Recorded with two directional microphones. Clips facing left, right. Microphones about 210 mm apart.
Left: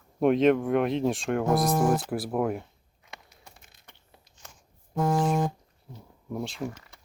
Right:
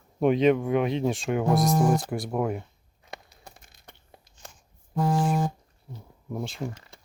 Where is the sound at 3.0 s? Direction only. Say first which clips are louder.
Right 5 dB; 40° right (ahead or behind).